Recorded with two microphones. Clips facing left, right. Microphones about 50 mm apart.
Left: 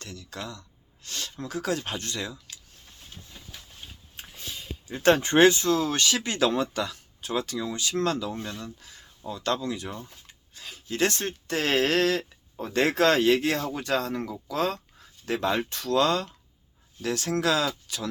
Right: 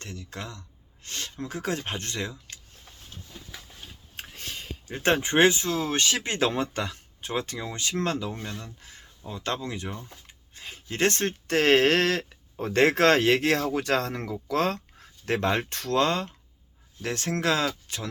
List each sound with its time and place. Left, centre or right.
0.0 s speech: right
4.2 s a sound: right
5.1 s speech: centre; by 18.1 s right